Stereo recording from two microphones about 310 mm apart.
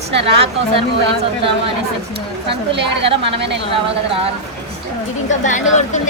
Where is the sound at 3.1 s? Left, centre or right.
Centre.